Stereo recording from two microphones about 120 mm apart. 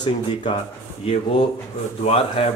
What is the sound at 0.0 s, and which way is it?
Speech, 40° left (ahead or behind).